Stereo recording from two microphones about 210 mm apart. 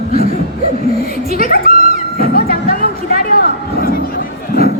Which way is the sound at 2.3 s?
45° left (ahead or behind).